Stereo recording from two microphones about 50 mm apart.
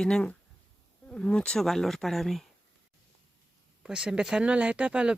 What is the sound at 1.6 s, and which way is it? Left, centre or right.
Speech, centre.